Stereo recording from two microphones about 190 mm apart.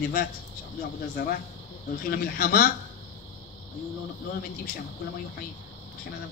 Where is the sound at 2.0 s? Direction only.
50° left (ahead or behind).